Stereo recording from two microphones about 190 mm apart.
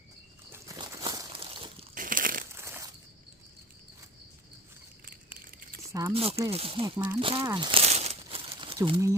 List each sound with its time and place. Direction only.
0.5 s crumpling: 15° right (ahead or behind)
1.4 s a sound: 30° right (ahead or behind)
2.0 s crumpling: 45° right (ahead or behind)
2.5 s a sound: 15° right (ahead or behind)
5.0 s a sound: 50° right (ahead or behind)
5.9 s speech: 15° right (ahead or behind)
6.1 s speech: 30° right (ahead or behind)
6.9 s speech: 10° right (ahead or behind)
7.2 s speech: 30° right (ahead or behind)
7.4 s crumpling: 25° right (ahead or behind)